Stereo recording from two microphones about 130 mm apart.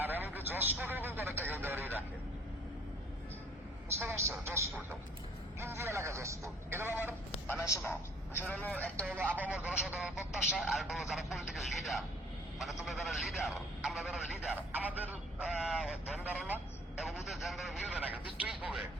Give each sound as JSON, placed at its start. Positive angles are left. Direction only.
{"t": 0.0, "sound": "a man's voice", "side_deg": -15}
{"t": 3.9, "sound": "speech", "side_deg": -20}
{"t": 7.4, "sound": "a man's voice", "side_deg": 20}
{"t": 9.3, "sound": "a man's voice", "side_deg": -15}
{"t": 14.4, "sound": "a man's voice", "side_deg": -10}